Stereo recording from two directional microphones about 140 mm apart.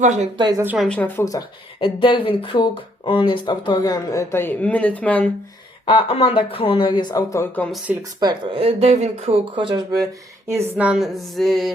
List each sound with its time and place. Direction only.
0.0 s speech: 55° right (ahead or behind)
0.3 s speech: 30° right (ahead or behind)
0.8 s speech: 10° left (ahead or behind)
1.2 s speech: 25° left (ahead or behind)
1.8 s speech: 35° left (ahead or behind); by 5.3 s 10° left (ahead or behind)
5.8 s speech: 40° left (ahead or behind)
8.2 s speech: 35° right (ahead or behind)
9.6 s speech: 30° right (ahead or behind)
10.8 s speech: 5° right (ahead or behind)